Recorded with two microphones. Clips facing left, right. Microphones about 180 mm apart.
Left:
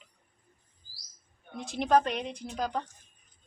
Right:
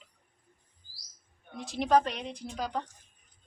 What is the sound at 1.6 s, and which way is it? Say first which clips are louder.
Speech: even; centre (ahead or behind).